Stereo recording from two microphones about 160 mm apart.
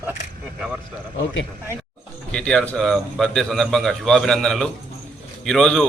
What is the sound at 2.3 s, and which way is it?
A man's voice, 5° left (ahead or behind).